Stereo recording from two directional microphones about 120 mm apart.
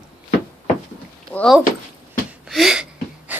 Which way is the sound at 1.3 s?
10° left (ahead or behind).